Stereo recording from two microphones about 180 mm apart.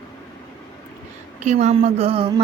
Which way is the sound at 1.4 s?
40° right (ahead or behind).